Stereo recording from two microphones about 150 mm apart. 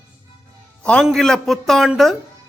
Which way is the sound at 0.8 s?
5° left (ahead or behind).